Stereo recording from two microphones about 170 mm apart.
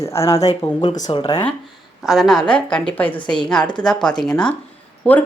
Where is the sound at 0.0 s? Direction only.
15° left (ahead or behind).